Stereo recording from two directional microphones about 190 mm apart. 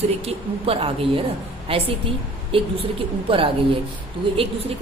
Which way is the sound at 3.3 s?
25° right (ahead or behind).